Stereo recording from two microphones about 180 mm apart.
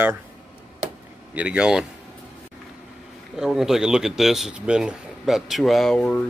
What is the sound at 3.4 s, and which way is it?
A man's voice, centre (ahead or behind).